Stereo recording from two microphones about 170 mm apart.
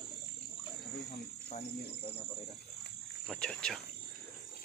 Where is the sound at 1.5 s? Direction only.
35° left (ahead or behind).